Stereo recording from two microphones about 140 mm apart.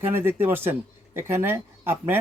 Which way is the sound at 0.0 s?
15° right (ahead or behind).